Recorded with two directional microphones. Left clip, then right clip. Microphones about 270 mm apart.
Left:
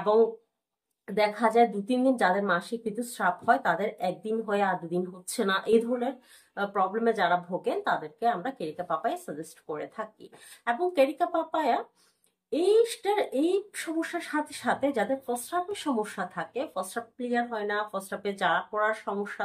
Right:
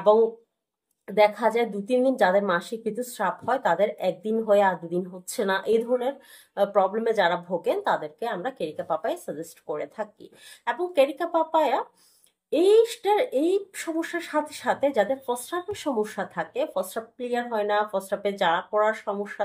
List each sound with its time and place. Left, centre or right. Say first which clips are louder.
1.0 s a woman's voice: right 5 dB; centre
12.8 s a woman's voice: right 4 dB; centre